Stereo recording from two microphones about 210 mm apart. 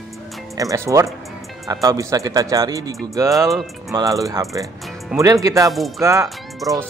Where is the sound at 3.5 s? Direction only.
Centre (ahead or behind).